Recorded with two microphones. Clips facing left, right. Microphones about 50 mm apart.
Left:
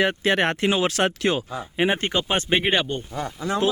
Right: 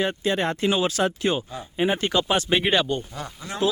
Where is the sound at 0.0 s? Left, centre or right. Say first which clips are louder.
Left 3 dB; left.